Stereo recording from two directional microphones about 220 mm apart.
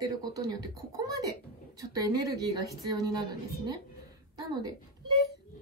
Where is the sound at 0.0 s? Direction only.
15° right (ahead or behind).